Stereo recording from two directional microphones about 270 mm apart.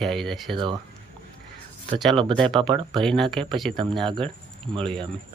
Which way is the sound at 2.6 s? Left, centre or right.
Centre.